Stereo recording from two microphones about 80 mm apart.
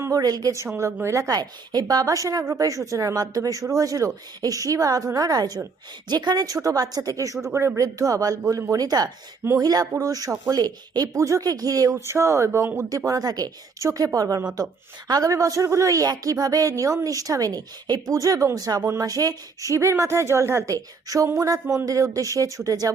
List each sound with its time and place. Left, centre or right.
0.0 s a woman's voice: right
1.0 s speech: right
1.3 s a woman's voice: right
7.4 s speech: right
7.8 s a woman's voice: right
13.1 s a woman's voice: right